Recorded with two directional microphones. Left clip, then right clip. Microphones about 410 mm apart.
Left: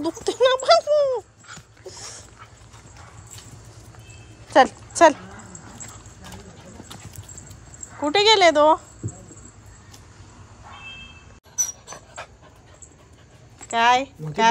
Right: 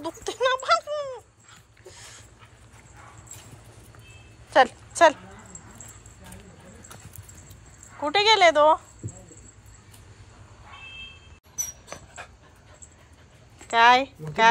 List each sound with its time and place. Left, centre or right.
0.0 s a sound: centre
1.9 s dog: centre
4.5 s speech: centre
8.0 s speech: centre
13.7 s speech: centre